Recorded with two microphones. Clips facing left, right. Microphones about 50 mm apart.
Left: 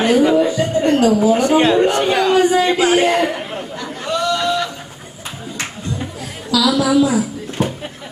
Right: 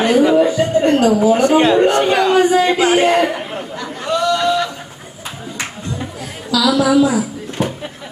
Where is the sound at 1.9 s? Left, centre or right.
Centre.